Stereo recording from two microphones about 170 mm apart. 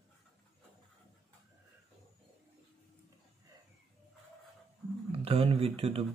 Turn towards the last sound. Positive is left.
turn(degrees=-35)  # may be behind; listen again after turning